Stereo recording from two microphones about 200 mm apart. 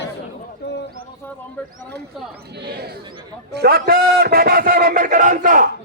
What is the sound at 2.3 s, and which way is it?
A man's voice, 55° right (ahead or behind).